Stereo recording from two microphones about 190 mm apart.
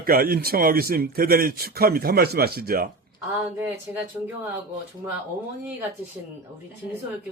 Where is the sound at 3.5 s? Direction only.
10° right (ahead or behind).